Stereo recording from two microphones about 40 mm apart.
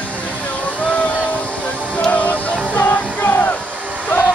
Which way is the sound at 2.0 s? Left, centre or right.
Left.